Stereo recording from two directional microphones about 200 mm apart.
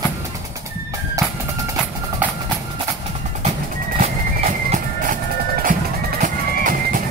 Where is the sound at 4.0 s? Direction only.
40° right (ahead or behind).